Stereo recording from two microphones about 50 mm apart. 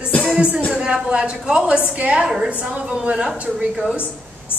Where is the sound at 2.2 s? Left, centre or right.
Centre.